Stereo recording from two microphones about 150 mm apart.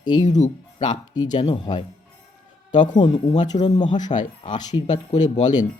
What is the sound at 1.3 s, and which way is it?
Speech, 30° left (ahead or behind).